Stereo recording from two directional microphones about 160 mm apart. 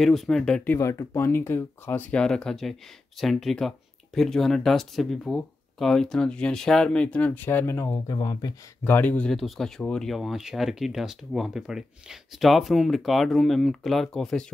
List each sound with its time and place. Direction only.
0.0 s speech: centre (ahead or behind)
0.7 s speech: 15° left (ahead or behind)
8.8 s speech: 10° left (ahead or behind)